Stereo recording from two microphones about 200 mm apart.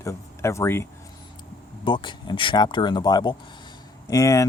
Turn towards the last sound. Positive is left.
turn(degrees=15)  # may be behind; listen again after turning